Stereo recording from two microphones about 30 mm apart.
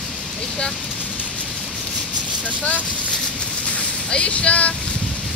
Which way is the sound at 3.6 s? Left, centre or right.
Left.